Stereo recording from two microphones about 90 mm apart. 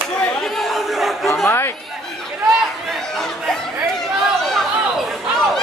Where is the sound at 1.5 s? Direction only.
25° left (ahead or behind).